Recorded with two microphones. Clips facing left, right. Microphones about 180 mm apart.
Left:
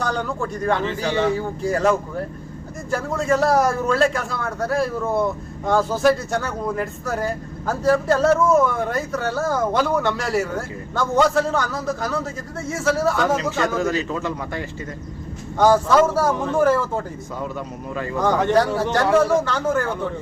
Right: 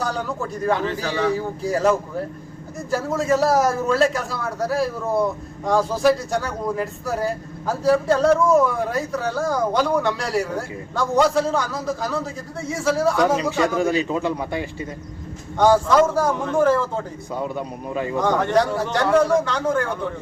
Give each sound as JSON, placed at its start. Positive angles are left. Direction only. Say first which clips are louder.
{"t": 0.0, "sound": "speech", "louder": "left 1 dB", "side_deg": -5}
{"t": 1.0, "sound": "a man's voice", "louder": "left 4 dB", "side_deg": 25}
{"t": 1.6, "sound": "a man's voice", "louder": "even", "side_deg": -5}
{"t": 13.7, "sound": "speech", "louder": "right 2 dB", "side_deg": -15}
{"t": 15.5, "sound": "speech", "louder": "even", "side_deg": 5}
{"t": 17.3, "sound": "speech", "louder": "right 3 dB", "side_deg": -20}
{"t": 18.5, "sound": "a man's voice", "louder": "left 1 dB", "side_deg": 5}